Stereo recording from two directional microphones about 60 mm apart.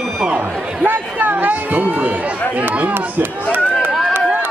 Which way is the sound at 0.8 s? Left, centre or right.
Right.